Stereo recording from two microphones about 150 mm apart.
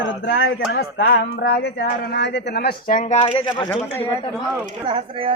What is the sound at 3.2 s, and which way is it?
Speech, 35° left (ahead or behind).